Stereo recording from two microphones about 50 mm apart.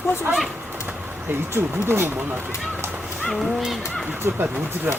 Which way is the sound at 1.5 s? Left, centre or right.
Right.